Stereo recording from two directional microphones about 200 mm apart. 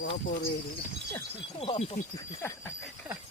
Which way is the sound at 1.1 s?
25° left (ahead or behind).